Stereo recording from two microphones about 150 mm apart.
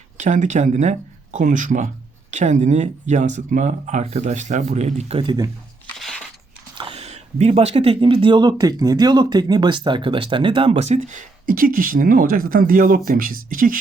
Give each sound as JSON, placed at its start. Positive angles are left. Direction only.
{"t": 0.2, "sound": "speech", "side_deg": -55}
{"t": 6.0, "sound": "crunch", "side_deg": 5}
{"t": 6.9, "sound": "speech", "side_deg": -45}